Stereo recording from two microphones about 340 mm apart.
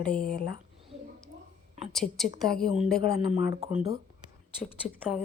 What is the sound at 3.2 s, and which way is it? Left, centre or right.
Speech, centre.